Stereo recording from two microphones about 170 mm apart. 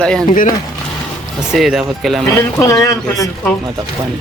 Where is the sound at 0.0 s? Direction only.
5° left (ahead or behind).